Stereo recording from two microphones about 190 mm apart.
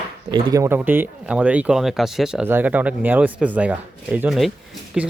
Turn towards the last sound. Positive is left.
turn(degrees=-5)  # may be behind; listen again after turning